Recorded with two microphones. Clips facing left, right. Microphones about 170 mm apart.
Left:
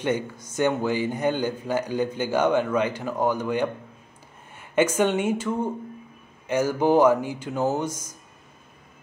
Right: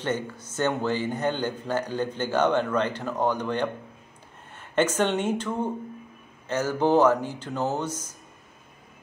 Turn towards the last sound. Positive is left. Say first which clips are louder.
# left 3 dB
turn(degrees=10)  # may be behind; listen again after turning